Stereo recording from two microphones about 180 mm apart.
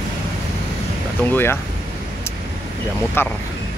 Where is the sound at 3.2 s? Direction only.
10° left (ahead or behind).